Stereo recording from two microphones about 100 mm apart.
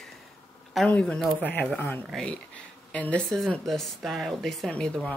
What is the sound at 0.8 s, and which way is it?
A woman's voice, 10° left (ahead or behind).